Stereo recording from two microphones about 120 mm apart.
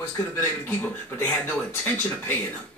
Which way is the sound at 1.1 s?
15° left (ahead or behind).